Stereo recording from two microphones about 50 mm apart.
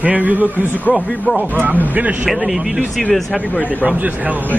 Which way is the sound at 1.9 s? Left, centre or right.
Right.